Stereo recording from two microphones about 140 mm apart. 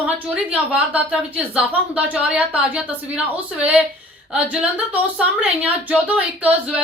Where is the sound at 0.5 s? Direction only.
10° right (ahead or behind).